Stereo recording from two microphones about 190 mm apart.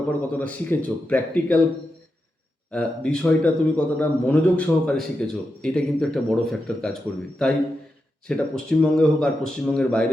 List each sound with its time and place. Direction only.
0.3 s a man's voice: 10° left (ahead or behind)
2.7 s a man's voice: 5° left (ahead or behind)